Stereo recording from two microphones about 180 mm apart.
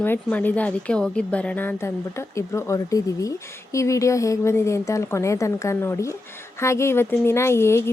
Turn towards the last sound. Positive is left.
turn(degrees=15)  # may be behind; listen again after turning